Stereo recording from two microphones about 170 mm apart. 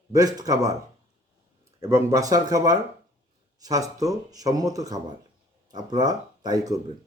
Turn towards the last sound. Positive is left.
turn(degrees=-20)  # may be behind; listen again after turning